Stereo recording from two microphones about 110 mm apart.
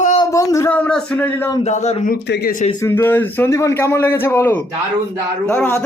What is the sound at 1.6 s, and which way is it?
Speech, 85° left.